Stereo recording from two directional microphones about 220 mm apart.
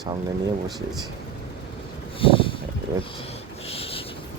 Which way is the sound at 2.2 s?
25° left (ahead or behind).